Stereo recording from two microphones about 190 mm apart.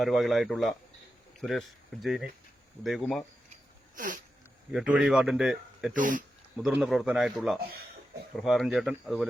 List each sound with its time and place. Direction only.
0.0 s a man's voice: centre (ahead or behind)
3.9 s a sound: 45° right (ahead or behind)
4.7 s a man's voice: 5° right (ahead or behind)
5.9 s speech: 45° right (ahead or behind)
6.6 s a man's voice: 5° right (ahead or behind)